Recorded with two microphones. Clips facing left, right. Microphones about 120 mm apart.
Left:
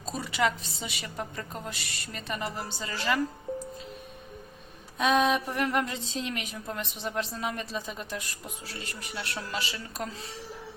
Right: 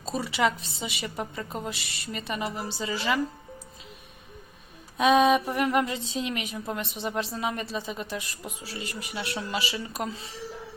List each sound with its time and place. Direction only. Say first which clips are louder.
0.1 s speech: right 2 dB; 5° right (ahead or behind)
4.9 s a woman's voice: right 4 dB; 5° right (ahead or behind)